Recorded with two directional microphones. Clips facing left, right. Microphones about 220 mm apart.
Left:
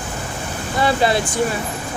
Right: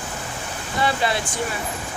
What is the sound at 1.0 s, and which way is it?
Speech, 35° left (ahead or behind).